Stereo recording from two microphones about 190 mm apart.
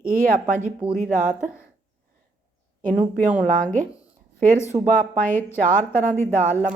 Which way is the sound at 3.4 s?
45° right (ahead or behind).